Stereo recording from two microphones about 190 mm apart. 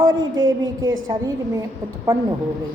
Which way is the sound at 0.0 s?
20° right (ahead or behind).